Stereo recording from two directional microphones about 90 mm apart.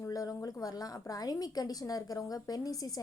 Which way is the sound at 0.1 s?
40° left (ahead or behind).